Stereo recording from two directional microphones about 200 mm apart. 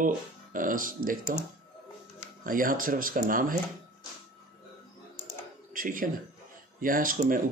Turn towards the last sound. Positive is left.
turn(degrees=-45)  # may be behind; listen again after turning